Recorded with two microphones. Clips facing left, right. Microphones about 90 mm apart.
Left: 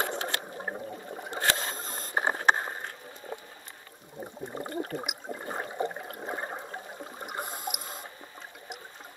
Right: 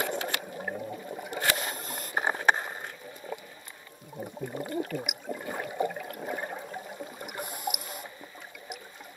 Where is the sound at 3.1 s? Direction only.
25° left (ahead or behind).